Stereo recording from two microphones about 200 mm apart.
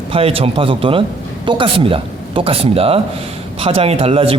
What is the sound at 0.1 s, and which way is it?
A man's voice, 30° right (ahead or behind).